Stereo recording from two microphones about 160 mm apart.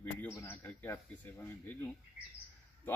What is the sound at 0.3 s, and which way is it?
Speech, 15° left (ahead or behind).